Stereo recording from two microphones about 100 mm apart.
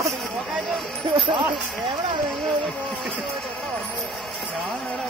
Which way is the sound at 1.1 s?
60° right (ahead or behind).